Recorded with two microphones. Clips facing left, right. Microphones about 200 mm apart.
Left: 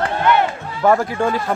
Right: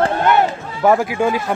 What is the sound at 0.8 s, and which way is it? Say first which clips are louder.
Speech: right 1 dB; 10° right (ahead or behind).